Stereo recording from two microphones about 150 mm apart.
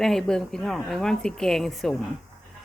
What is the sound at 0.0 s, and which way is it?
Speech, 5° left (ahead or behind).